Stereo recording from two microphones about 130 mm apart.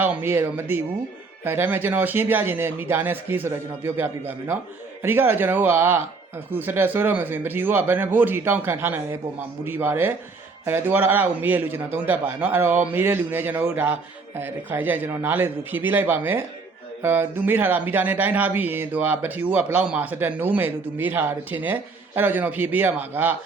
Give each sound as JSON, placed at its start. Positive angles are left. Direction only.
{"t": 0.0, "sound": "speech", "side_deg": -15}